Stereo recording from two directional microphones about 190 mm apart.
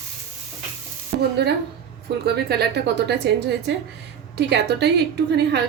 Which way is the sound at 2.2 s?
60° right (ahead or behind).